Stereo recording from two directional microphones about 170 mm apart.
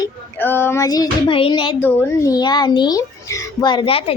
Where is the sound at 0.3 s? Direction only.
15° left (ahead or behind).